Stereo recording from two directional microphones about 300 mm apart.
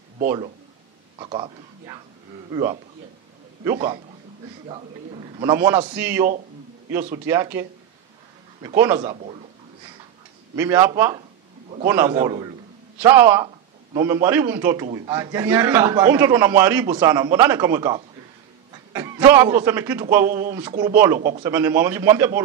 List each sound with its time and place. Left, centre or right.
1.1 s a man's voice: centre
4.6 s a man's voice: centre
7.2 s a man's voice: centre
8.6 s a man's voice: centre
10.5 s a man's voice: centre
21.5 s a man's voice: centre